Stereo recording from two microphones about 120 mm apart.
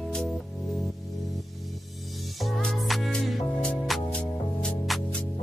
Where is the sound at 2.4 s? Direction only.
Centre (ahead or behind).